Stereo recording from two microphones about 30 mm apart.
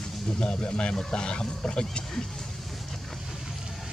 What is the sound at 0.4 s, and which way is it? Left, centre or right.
Speech, left.